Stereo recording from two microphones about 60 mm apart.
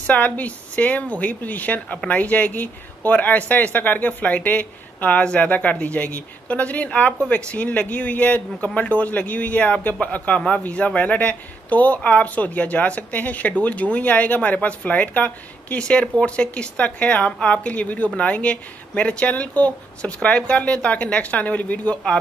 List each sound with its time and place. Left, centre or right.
0.0 s speech: left